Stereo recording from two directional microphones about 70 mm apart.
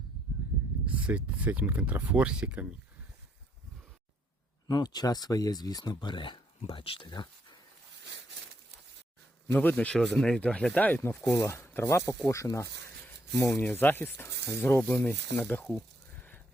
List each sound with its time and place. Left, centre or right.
0.9 s speech: centre
4.7 s speech: left
9.5 s speech: left
9.7 s speech: centre
10.4 s speech: centre
11.3 s speech: left
13.6 s speech: left
16.1 s a sound: left